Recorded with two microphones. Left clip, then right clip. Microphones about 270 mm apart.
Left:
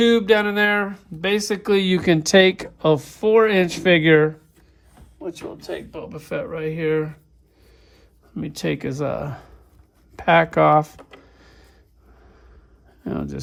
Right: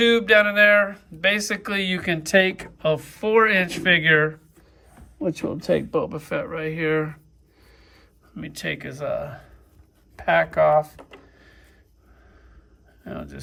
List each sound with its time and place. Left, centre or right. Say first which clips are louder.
0.0 s speech: even; centre
5.3 s speech: right 8 dB; right; by 10.9 s left
11.3 s a sound: left 1 dB; left
13.1 s speech: left 7 dB; left